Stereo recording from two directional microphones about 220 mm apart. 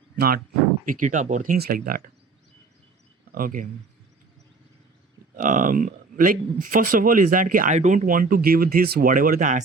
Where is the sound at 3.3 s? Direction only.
40° right (ahead or behind).